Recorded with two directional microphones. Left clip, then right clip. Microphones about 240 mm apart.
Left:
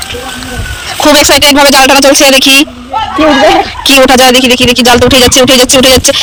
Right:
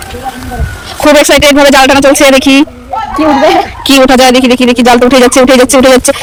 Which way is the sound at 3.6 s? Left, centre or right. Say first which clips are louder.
Left 1 dB; centre.